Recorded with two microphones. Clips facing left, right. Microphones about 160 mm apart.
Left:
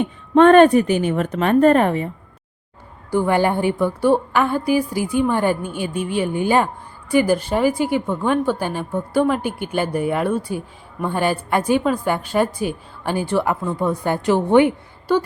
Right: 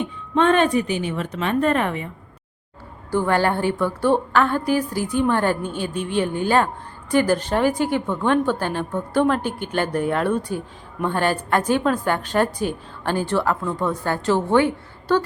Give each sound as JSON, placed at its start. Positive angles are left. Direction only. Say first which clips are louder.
{"t": 0.3, "sound": "a woman's voice", "louder": "left 7 dB", "side_deg": 50}
{"t": 3.1, "sound": "a woman's voice", "louder": "left 2 dB", "side_deg": 15}